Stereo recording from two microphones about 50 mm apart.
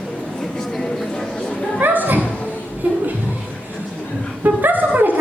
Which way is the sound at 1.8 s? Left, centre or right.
Right.